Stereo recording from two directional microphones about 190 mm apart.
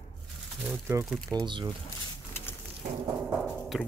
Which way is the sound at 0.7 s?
15° right (ahead or behind).